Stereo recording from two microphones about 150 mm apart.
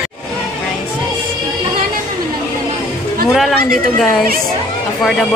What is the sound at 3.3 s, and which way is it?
Speech, centre (ahead or behind).